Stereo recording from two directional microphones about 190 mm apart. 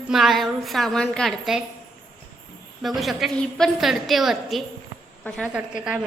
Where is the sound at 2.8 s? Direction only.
Centre (ahead or behind).